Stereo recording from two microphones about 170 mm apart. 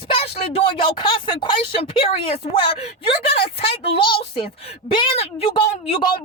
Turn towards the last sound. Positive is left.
turn(degrees=30)  # may be behind; listen again after turning